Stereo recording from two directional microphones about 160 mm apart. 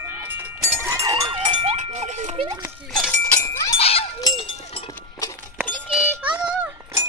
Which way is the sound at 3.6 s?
40° left (ahead or behind).